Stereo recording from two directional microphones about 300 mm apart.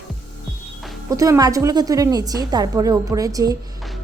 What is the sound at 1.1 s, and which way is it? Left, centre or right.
A woman's voice, centre.